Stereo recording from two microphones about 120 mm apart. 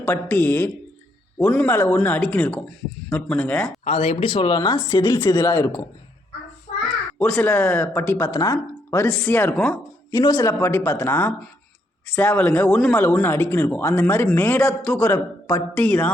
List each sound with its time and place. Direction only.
0.0 s speech: 15° left (ahead or behind)
3.8 s speech: 55° left (ahead or behind); by 4.8 s 40° left (ahead or behind)
5.2 s speech: 25° left (ahead or behind)
7.1 s speech: 10° left (ahead or behind)
8.3 s speech: 30° left (ahead or behind)
10.1 s speech: 35° left (ahead or behind)
10.6 s speech: 20° left (ahead or behind)